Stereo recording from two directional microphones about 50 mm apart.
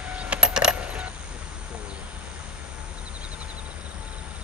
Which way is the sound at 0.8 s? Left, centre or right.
Right.